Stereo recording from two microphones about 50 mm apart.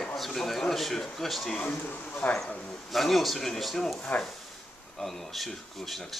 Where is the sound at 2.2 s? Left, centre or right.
Left.